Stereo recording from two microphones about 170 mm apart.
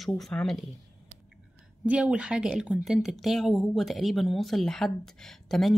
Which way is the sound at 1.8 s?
5° right (ahead or behind).